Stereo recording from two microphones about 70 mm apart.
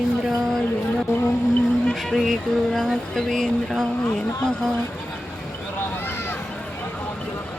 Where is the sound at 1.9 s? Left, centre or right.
Centre.